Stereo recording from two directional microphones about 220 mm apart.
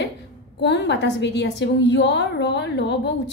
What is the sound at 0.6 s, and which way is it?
A woman's voice, 50° left (ahead or behind).